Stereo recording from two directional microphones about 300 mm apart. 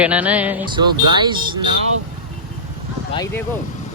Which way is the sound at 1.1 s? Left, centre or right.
Centre.